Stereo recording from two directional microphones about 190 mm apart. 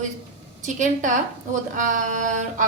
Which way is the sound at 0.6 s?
40° right (ahead or behind).